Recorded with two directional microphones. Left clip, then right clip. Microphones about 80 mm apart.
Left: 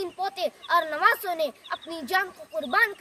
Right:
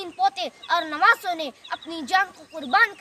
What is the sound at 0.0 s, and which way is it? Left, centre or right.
A child's voice, left.